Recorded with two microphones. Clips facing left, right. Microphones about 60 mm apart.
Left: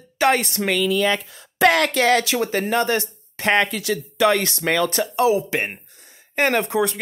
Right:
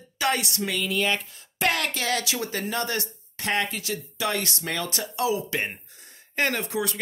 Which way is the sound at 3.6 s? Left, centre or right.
Left.